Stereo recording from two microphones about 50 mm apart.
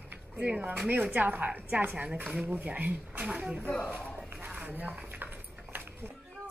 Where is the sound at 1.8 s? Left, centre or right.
Right.